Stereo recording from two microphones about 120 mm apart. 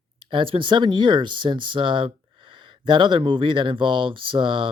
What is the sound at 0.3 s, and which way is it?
Speech, 50° right (ahead or behind).